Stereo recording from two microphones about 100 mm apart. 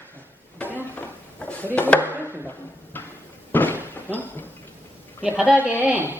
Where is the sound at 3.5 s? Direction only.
20° left (ahead or behind).